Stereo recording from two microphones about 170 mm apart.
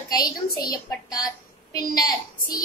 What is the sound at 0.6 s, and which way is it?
A woman's voice, 20° left (ahead or behind).